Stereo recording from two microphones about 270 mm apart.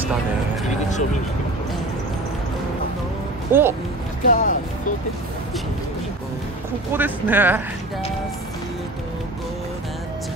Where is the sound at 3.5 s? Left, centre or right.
Centre.